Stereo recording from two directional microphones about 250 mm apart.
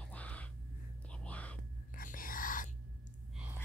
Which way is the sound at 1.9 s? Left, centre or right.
Left.